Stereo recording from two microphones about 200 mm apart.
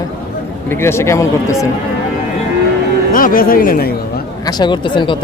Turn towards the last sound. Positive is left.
turn(degrees=25)  # may be behind; listen again after turning